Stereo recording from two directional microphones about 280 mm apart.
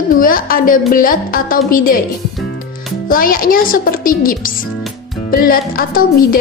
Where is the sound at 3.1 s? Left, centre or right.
Left.